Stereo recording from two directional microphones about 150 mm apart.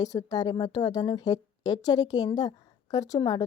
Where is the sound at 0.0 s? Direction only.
25° left (ahead or behind).